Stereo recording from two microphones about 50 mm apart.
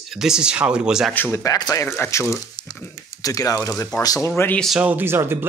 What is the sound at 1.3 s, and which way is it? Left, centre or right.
Speech, left.